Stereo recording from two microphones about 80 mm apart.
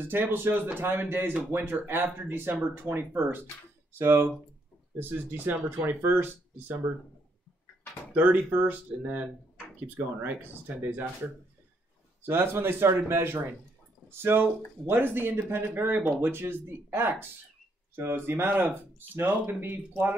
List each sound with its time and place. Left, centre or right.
0.0 s speech: right
8.1 s speech: right
12.2 s speech: right